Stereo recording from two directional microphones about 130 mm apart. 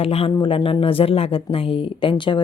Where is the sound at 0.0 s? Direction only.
50° left (ahead or behind).